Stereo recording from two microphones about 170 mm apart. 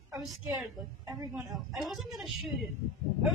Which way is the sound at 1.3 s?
Centre (ahead or behind).